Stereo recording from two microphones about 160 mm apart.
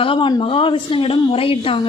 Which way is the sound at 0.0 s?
30° left (ahead or behind).